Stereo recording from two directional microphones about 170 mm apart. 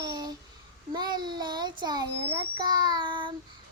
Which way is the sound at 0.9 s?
25° right (ahead or behind).